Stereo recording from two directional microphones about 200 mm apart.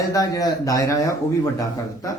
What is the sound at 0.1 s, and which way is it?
Speech, 15° left (ahead or behind).